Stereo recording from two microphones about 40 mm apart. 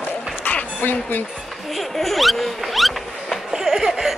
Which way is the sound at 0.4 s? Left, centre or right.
Left.